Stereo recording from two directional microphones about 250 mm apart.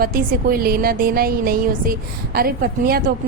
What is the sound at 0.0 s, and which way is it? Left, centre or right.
A woman's voice, right.